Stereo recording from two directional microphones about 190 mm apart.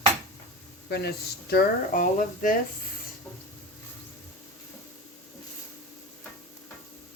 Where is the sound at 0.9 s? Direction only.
60° left (ahead or behind).